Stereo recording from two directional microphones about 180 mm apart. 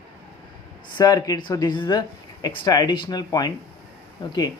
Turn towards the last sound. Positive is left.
turn(degrees=25)  # may be behind; listen again after turning